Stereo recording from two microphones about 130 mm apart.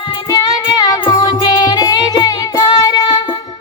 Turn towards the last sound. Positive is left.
turn(degrees=35)  # may be behind; listen again after turning